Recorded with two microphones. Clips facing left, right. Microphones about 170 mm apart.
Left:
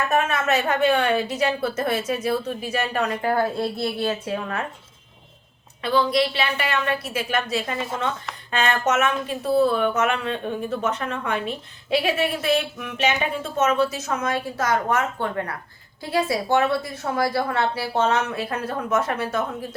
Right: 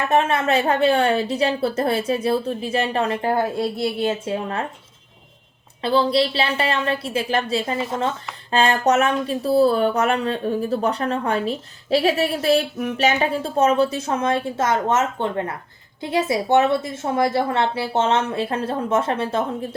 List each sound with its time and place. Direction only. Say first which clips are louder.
0.1 s a woman's voice: right 5 dB; 30° right (ahead or behind)
5.8 s a woman's voice: right 2 dB; 30° right (ahead or behind)